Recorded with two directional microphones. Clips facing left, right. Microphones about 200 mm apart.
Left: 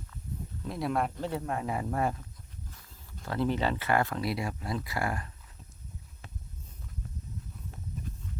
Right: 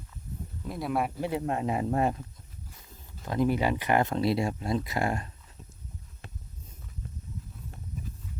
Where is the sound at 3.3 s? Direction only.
15° right (ahead or behind).